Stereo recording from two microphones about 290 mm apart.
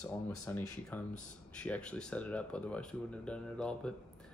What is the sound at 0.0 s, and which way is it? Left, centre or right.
Speech, centre.